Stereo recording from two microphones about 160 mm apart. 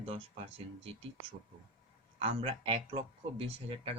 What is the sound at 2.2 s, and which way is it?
Speech, 35° right (ahead or behind).